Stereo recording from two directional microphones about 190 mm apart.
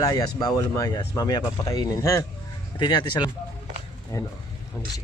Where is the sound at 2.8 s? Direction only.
25° left (ahead or behind).